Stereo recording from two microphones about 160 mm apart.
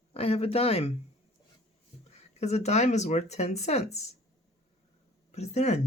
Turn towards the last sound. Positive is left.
turn(degrees=45)  # may be behind; listen again after turning